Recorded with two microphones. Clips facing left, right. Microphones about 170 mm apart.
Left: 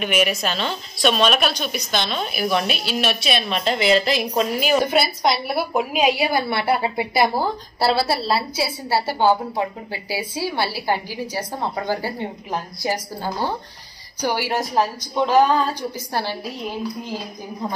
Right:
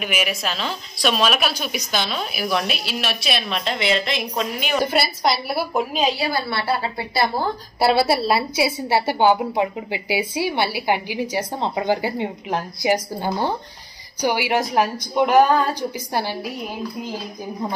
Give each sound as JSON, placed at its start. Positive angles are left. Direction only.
{"t": 0.0, "sound": "a woman's voice", "side_deg": 0}
{"t": 5.9, "sound": "a woman's voice", "side_deg": 15}
{"t": 7.8, "sound": "a woman's voice", "side_deg": -20}